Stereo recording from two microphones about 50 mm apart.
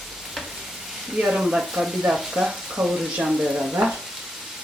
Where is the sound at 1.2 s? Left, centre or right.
Centre.